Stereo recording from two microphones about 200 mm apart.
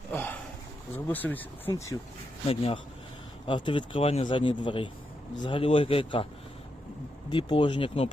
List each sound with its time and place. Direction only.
0.1 s a sound: 10° left (ahead or behind)
0.9 s speech: 10° left (ahead or behind)
2.5 s speech: 30° left (ahead or behind)
7.3 s speech: 25° left (ahead or behind)